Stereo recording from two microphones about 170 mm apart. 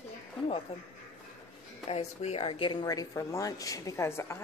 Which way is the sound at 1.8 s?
35° left (ahead or behind).